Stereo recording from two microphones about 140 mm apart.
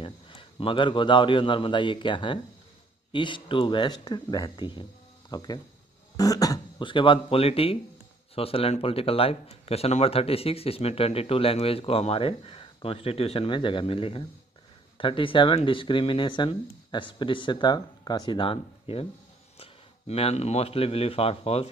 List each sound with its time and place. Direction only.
0.0 s a man's voice: 40° left (ahead or behind)